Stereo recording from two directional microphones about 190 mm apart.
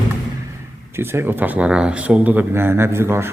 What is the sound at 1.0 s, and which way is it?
Speech, 10° right (ahead or behind).